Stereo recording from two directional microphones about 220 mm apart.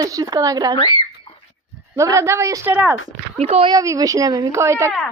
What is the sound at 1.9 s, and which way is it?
Speech, 15° right (ahead or behind).